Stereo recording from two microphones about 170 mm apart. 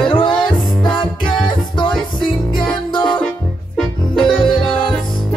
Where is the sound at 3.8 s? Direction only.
5° left (ahead or behind).